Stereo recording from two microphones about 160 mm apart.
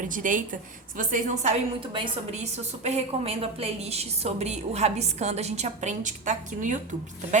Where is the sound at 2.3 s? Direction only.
45° right (ahead or behind).